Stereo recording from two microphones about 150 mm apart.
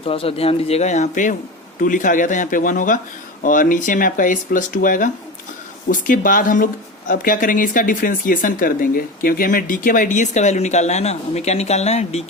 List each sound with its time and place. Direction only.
0.0 s a man's voice: 40° left (ahead or behind)